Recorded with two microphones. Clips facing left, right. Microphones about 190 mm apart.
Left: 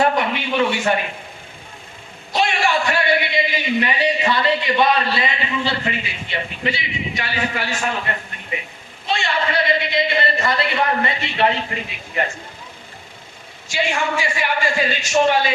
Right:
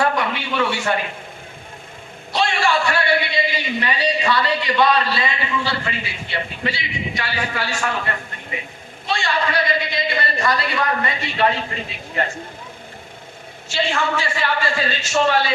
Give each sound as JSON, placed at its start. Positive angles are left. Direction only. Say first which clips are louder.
{"t": 0.0, "sound": "a sound", "louder": "left 2 dB", "side_deg": 20}
{"t": 2.3, "sound": "a man's voice", "louder": "even", "side_deg": 15}
{"t": 13.7, "sound": "a man's voice", "louder": "even", "side_deg": 15}